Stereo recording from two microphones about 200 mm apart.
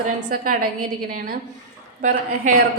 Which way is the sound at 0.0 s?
45° right (ahead or behind).